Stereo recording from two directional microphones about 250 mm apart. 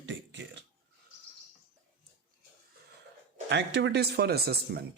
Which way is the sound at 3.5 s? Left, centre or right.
Right.